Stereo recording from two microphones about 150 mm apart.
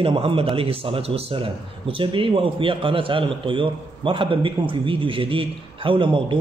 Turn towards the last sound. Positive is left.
turn(degrees=-35)  # may be behind; listen again after turning